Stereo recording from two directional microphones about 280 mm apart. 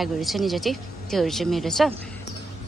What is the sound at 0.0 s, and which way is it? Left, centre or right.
Speech, centre.